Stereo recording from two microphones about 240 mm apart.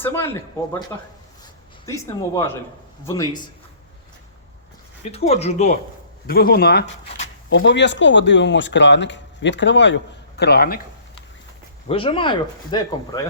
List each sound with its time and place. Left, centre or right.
0.0 s speech: centre
1.9 s speech: centre
5.1 s speech: left
6.2 s speech: left
11.9 s speech: left